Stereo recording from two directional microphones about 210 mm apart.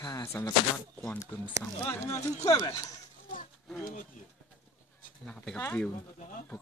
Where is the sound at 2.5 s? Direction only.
20° left (ahead or behind).